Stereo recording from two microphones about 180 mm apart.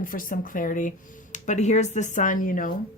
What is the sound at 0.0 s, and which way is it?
A woman's voice, 50° left (ahead or behind).